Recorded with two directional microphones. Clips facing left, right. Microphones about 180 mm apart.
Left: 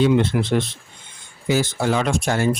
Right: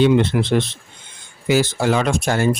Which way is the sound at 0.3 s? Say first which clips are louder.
Right 2 dB; 70° right (ahead or behind).